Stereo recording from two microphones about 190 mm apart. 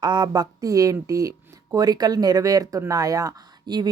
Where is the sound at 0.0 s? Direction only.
20° right (ahead or behind).